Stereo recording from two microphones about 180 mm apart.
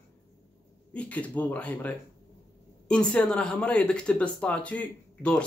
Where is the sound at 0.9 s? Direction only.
5° left (ahead or behind).